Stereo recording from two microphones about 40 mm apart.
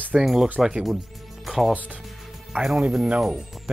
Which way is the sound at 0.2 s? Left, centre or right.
Centre.